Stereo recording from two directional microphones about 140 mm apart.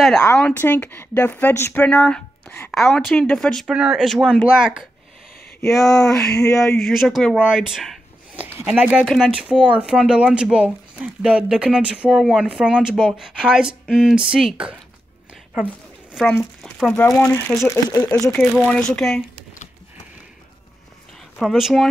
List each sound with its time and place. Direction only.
0.4 s speech: 10° left (ahead or behind)
2.7 s speech: centre (ahead or behind)
9.0 s speech: 5° left (ahead or behind)
9.3 s speech: 10° right (ahead or behind)
15.5 s a sound: 5° right (ahead or behind)
16.3 s speech: 5° left (ahead or behind)
17.6 s speech: 25° left (ahead or behind)
18.7 s speech: 5° left (ahead or behind)
21.4 s speech: centre (ahead or behind)